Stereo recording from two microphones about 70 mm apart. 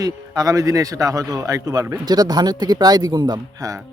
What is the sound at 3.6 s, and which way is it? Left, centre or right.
Speech, right.